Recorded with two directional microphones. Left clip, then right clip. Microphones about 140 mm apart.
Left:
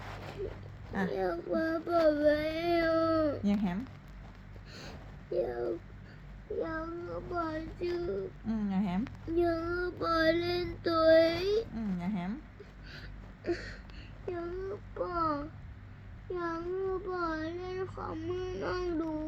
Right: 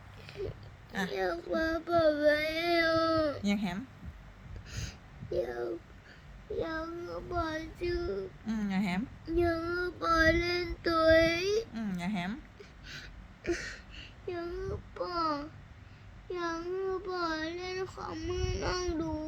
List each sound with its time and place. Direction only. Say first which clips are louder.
1.1 s child singing: even; 15° right (ahead or behind)
3.4 s speech: even; 65° right (ahead or behind)
5.3 s child singing: left 1 dB; 25° right (ahead or behind)
6.6 s child singing: right 1 dB; 50° right (ahead or behind)
7.4 s child singing: right 1 dB; 25° right (ahead or behind)
8.4 s speech: right 3 dB; 70° right (ahead or behind)
9.3 s child singing: even; 20° right (ahead or behind)
11.7 s speech: right 1 dB; 70° right (ahead or behind)
12.9 s a sound: right 5 dB; 20° right (ahead or behind)
14.7 s babbling: left 1 dB; 30° right (ahead or behind)
16.3 s child singing: even; 25° right (ahead or behind)
18.1 s a sound: even; 30° right (ahead or behind)